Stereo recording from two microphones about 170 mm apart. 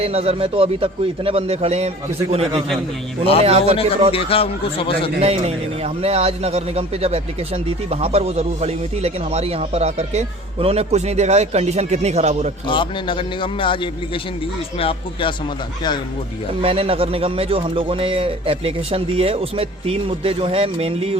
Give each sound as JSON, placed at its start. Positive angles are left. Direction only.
{"t": 0.0, "sound": "a man's voice", "side_deg": -35}
{"t": 4.1, "sound": "speech", "side_deg": 35}
{"t": 5.2, "sound": "a man's voice", "side_deg": -35}
{"t": 12.6, "sound": "a man's voice", "side_deg": 30}
{"t": 16.6, "sound": "a man's voice", "side_deg": -35}